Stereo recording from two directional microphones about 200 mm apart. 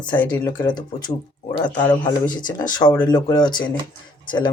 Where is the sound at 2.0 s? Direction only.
20° left (ahead or behind).